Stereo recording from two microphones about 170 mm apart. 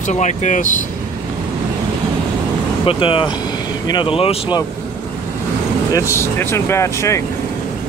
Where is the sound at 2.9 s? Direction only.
30° left (ahead or behind).